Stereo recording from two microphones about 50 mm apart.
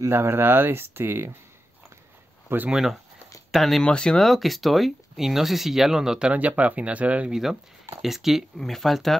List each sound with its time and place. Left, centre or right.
0.1 s speech: right
2.7 s speech: centre
3.8 s speech: centre
4.2 s speech: centre
6.3 s speech: right
7.2 s speech: centre
8.5 s speech: centre